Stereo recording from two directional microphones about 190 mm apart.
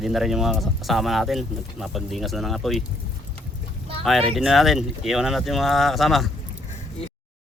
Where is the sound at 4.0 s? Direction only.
Centre (ahead or behind).